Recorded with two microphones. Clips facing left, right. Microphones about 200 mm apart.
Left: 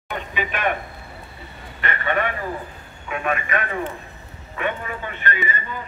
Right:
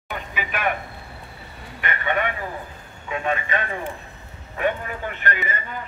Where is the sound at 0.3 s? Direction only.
5° right (ahead or behind).